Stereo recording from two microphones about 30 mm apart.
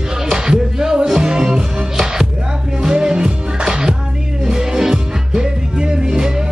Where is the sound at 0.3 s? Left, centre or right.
Right.